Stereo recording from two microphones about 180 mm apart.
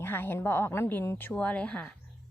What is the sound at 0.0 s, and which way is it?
Speech, 10° left (ahead or behind).